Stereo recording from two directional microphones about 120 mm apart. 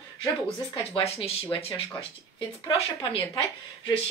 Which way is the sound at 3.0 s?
50° left (ahead or behind).